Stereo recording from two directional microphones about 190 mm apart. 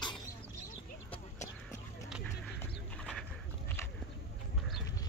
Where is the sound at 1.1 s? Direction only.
40° left (ahead or behind).